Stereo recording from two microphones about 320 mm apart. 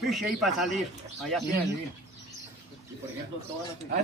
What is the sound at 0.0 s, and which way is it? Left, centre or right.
A man's voice, centre.